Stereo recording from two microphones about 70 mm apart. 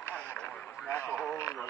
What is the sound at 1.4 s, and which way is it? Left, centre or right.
Radio, left.